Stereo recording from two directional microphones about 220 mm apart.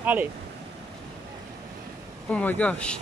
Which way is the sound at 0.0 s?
5° right (ahead or behind).